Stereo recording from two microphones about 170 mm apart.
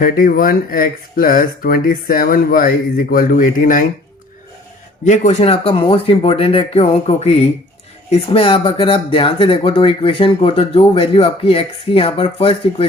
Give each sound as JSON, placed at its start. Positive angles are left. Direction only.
{"t": 0.0, "sound": "speech", "side_deg": 55}
{"t": 5.0, "sound": "speech", "side_deg": 45}